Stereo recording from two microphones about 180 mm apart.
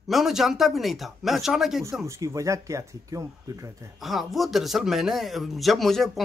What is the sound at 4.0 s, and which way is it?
Speech, centre (ahead or behind).